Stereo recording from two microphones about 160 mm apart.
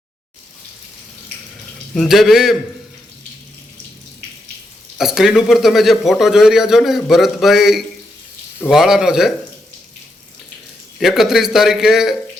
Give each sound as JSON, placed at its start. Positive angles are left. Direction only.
{"t": 1.9, "sound": "a man's voice", "side_deg": 0}
{"t": 4.9, "sound": "a man's voice", "side_deg": 0}
{"t": 11.0, "sound": "a man's voice", "side_deg": 0}